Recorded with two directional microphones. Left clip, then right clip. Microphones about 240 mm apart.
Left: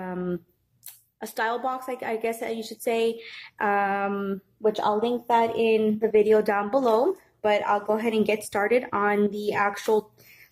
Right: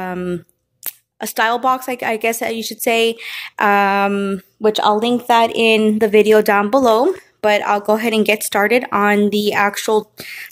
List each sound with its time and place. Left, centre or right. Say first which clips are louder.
0.0 s a woman's voice: right 8 dB; right